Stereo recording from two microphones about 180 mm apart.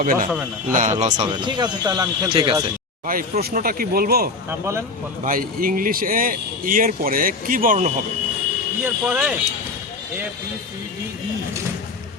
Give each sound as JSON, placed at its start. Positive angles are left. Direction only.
{"t": 0.0, "sound": "a man's voice", "side_deg": -45}
{"t": 1.2, "sound": "speech", "side_deg": -25}
{"t": 3.4, "sound": "speech", "side_deg": -55}
{"t": 8.8, "sound": "speech", "side_deg": -5}